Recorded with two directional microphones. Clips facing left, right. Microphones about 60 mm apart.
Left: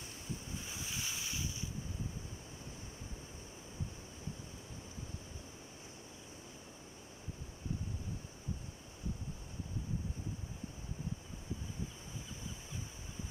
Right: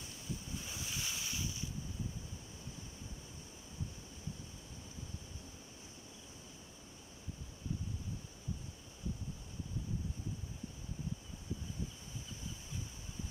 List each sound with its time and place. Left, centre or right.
0.6 s waves: centre